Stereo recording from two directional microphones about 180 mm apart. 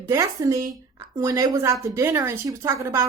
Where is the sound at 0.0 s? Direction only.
15° right (ahead or behind).